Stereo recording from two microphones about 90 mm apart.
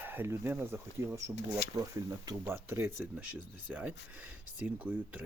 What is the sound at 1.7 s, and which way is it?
Speech, 45° right (ahead or behind).